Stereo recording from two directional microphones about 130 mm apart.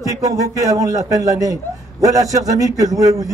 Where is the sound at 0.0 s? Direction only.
25° right (ahead or behind).